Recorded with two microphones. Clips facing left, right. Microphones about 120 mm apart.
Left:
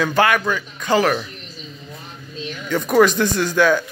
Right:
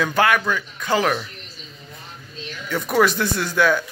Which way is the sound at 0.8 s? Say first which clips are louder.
Left 3 dB; 5° right (ahead or behind).